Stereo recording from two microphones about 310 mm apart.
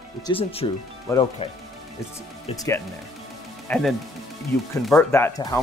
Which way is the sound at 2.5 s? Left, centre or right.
Centre.